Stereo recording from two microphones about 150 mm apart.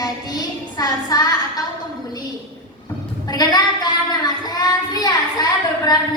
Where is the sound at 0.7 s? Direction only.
25° left (ahead or behind).